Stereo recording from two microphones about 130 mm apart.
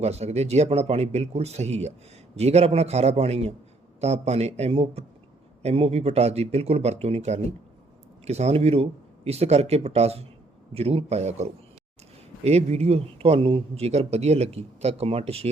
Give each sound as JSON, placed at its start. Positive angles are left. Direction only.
{"t": 0.0, "sound": "a man's voice", "side_deg": -55}
{"t": 12.5, "sound": "speech", "side_deg": -55}